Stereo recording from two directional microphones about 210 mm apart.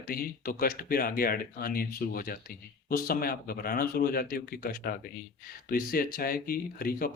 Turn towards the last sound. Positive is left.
turn(degrees=45)  # may be behind; listen again after turning